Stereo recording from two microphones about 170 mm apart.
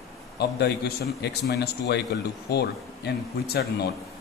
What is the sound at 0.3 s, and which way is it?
A man's voice, 75° left (ahead or behind).